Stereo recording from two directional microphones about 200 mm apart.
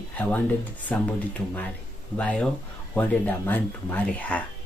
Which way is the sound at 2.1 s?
5° left (ahead or behind).